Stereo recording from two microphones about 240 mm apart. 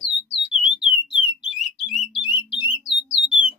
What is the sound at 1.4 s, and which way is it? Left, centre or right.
Music, centre.